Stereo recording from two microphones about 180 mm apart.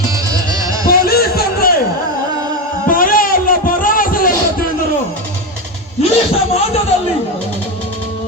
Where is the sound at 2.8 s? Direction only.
50° left (ahead or behind).